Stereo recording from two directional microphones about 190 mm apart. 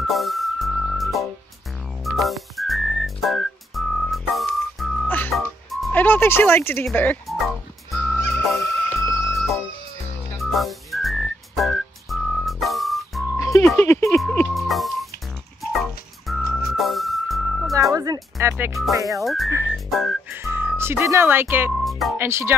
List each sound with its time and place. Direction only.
0.0 s music: centre (ahead or behind)
2.0 s whistling: centre (ahead or behind)
9.2 s music: centre (ahead or behind)
13.4 s music: 15° left (ahead or behind); by 17.7 s centre (ahead or behind)
17.9 s music: 20° right (ahead or behind)
19.2 s whistling: centre (ahead or behind)
20.2 s speech: 10° right (ahead or behind)
21.7 s music: centre (ahead or behind)
22.2 s speech: 15° right (ahead or behind)